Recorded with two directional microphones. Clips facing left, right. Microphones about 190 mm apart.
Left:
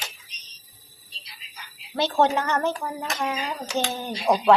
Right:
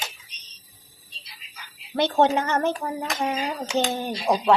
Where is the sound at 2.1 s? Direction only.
20° right (ahead or behind).